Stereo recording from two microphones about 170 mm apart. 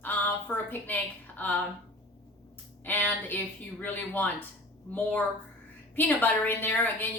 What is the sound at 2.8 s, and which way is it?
Speech, 10° left (ahead or behind).